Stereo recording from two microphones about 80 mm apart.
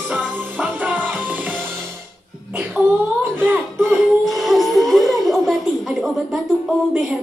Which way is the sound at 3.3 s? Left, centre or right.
Right.